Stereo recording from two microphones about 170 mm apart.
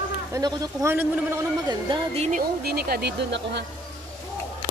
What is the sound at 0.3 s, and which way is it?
Speech, 25° right (ahead or behind).